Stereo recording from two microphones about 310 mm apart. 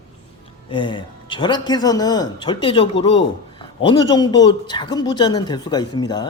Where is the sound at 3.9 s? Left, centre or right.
Centre.